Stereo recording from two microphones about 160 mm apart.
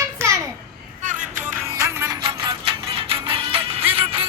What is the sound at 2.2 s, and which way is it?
Music, 30° right (ahead or behind).